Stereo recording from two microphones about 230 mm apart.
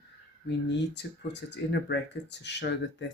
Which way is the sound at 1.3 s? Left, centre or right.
Left.